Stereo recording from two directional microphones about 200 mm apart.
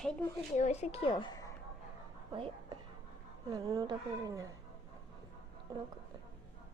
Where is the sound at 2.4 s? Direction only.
25° right (ahead or behind).